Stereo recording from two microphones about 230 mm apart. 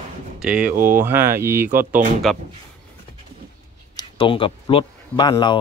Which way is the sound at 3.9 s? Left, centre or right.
Left.